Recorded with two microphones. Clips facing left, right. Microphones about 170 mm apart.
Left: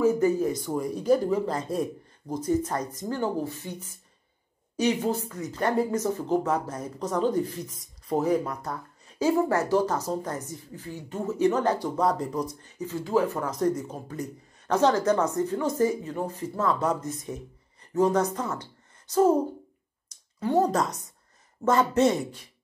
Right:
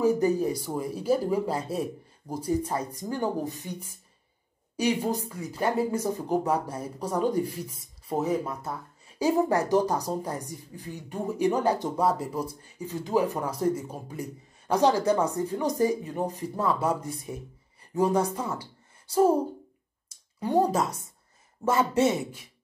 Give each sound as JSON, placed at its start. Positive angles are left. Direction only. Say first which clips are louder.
{"t": 0.0, "sound": "a sound", "louder": "left 1 dB", "side_deg": -35}
{"t": 0.7, "sound": "a woman's voice", "louder": "left 3 dB", "side_deg": -5}
{"t": 9.2, "sound": "a woman's voice", "louder": "even", "side_deg": -15}
{"t": 20.3, "sound": "a woman's voice", "louder": "left 1 dB", "side_deg": -15}